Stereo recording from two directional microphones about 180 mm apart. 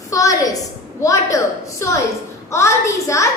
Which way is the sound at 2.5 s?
15° left (ahead or behind).